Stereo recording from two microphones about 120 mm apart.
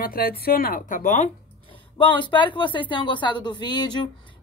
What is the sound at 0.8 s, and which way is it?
Speech, 90° left.